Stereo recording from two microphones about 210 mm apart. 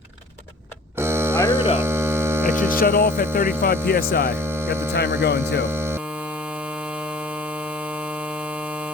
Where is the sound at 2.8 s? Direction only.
40° left (ahead or behind).